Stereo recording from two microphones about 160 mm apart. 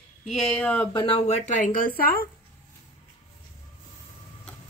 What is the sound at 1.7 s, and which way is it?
Speech, 65° left (ahead or behind).